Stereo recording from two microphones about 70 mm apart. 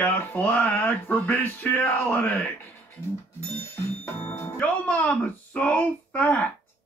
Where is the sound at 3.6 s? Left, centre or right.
Left.